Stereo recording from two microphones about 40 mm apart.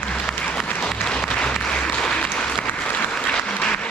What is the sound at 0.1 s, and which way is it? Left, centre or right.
Applause, centre.